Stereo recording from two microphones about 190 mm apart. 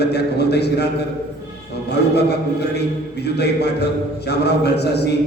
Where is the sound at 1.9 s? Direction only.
60° left (ahead or behind).